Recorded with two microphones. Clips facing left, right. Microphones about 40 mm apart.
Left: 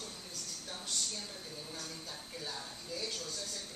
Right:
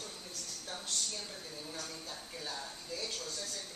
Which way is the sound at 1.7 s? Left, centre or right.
Centre.